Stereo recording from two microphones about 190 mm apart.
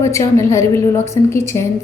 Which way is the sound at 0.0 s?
15° left (ahead or behind).